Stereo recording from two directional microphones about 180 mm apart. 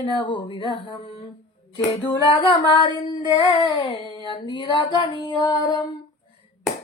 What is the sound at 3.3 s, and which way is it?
Child singing, 30° left (ahead or behind).